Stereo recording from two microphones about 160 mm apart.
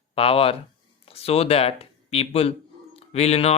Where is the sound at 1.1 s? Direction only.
40° left (ahead or behind).